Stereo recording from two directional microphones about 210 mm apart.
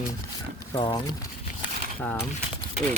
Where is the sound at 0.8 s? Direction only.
25° left (ahead or behind).